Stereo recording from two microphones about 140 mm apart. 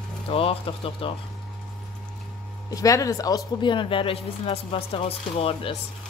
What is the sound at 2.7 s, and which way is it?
Speech, 25° left (ahead or behind).